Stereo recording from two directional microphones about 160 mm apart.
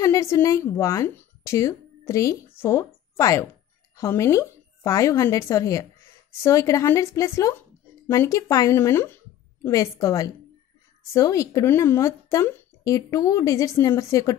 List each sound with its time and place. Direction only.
0.0 s a woman's voice: 20° left (ahead or behind)